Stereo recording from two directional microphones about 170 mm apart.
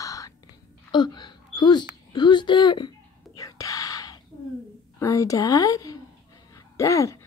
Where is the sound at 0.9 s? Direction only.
25° left (ahead or behind).